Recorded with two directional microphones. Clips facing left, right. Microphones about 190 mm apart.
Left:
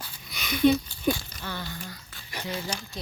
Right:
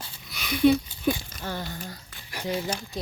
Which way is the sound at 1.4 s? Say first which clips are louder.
Right 3 dB; 45° right (ahead or behind).